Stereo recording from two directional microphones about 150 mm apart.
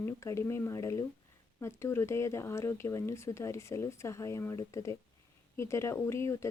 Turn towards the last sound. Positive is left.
turn(degrees=20)  # may be behind; listen again after turning